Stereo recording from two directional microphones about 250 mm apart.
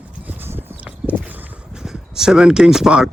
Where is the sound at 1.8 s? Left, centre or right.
Centre.